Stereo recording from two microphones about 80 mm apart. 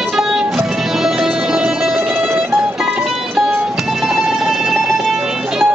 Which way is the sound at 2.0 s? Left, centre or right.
Right.